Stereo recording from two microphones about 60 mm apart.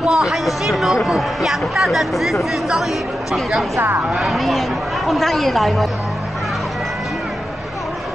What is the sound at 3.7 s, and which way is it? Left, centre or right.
Speech, right.